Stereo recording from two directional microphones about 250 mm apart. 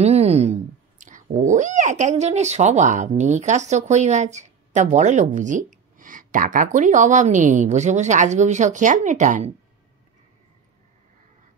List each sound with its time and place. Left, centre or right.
0.0 s speech: right